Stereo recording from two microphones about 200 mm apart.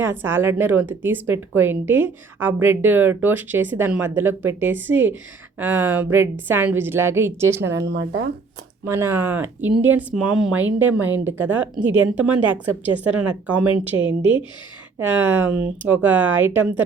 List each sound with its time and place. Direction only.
0.0 s speech: 10° right (ahead or behind)
7.9 s speech: 55° right (ahead or behind)
8.9 s speech: 15° right (ahead or behind)